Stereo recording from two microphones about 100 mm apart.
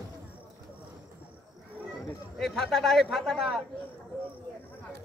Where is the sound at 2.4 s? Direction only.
Centre (ahead or behind).